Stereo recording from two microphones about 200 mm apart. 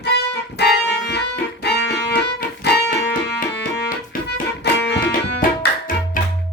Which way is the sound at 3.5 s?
60° left (ahead or behind).